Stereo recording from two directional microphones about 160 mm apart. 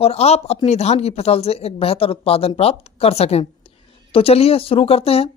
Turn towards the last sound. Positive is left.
turn(degrees=35)  # may be behind; listen again after turning